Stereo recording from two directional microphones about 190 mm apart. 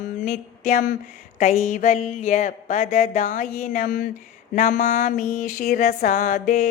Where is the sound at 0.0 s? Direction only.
40° left (ahead or behind).